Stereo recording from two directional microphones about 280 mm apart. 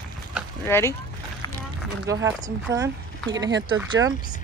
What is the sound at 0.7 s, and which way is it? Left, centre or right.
Speech, centre.